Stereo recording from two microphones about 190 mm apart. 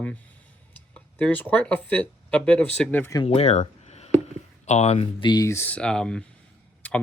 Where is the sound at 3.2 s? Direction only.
35° left (ahead or behind).